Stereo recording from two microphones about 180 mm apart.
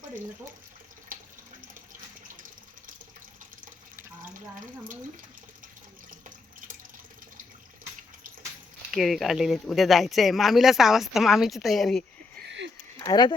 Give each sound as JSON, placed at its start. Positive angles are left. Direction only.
{"t": 8.9, "sound": "speech", "side_deg": 0}
{"t": 12.5, "sound": "a sound", "side_deg": -80}
{"t": 13.0, "sound": "speech", "side_deg": 20}